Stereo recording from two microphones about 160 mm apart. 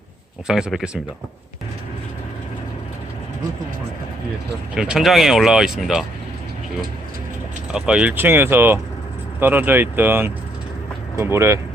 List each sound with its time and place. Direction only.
0.4 s speech: 5° right (ahead or behind)
4.7 s speech: 5° right (ahead or behind)
7.7 s speech: 5° right (ahead or behind)